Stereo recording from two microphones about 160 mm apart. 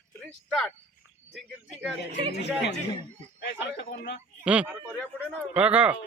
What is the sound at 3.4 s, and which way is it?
Speech, 90° left.